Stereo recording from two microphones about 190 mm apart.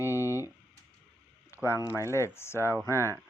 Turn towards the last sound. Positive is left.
turn(degrees=-10)  # may be behind; listen again after turning